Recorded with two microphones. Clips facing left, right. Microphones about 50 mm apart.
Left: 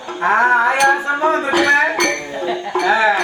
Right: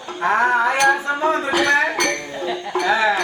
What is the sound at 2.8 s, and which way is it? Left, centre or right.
Speech, centre.